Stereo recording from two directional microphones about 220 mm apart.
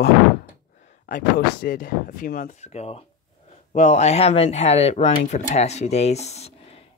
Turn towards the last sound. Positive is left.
turn(degrees=30)  # may be behind; listen again after turning